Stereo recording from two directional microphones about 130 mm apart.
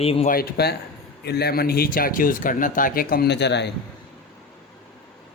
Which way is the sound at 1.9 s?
90° left.